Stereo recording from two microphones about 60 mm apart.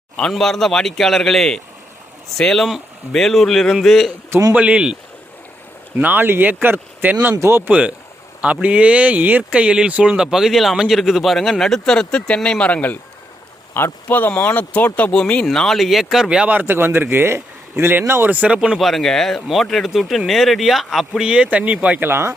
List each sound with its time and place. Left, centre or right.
0.2 s speech: centre
4.5 s speech: centre
6.0 s speech: right
7.3 s speech: right
7.7 s speech: right; by 13.0 s left
13.7 s speech: left
15.1 s speech: centre
15.4 s speech: centre
16.6 s speech: right
18.4 s speech: centre
18.8 s speech: centre
21.1 s speech: centre
22.1 s speech: right